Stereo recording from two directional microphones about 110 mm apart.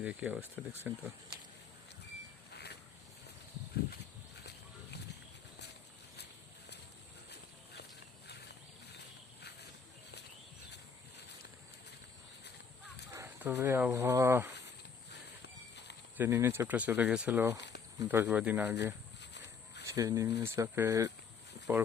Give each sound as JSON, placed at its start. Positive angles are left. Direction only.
{"t": 0.0, "sound": "speech", "side_deg": -10}
{"t": 0.5, "sound": "speech", "side_deg": 20}
{"t": 13.1, "sound": "speech", "side_deg": -20}
{"t": 16.1, "sound": "speech", "side_deg": -20}
{"t": 19.8, "sound": "speech", "side_deg": -30}